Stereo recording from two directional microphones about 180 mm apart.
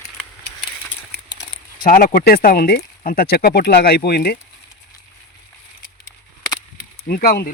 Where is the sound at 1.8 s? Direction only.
50° left (ahead or behind).